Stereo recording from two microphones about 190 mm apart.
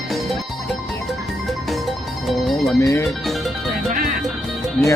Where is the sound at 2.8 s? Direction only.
15° left (ahead or behind).